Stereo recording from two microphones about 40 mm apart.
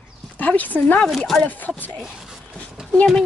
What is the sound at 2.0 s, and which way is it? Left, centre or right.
Speech, centre.